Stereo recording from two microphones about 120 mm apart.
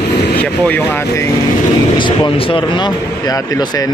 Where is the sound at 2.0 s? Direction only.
40° left (ahead or behind).